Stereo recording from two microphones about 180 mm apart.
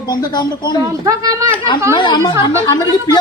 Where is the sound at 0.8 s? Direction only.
20° right (ahead or behind).